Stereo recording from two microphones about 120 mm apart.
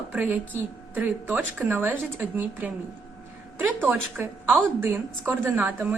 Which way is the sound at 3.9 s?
15° right (ahead or behind).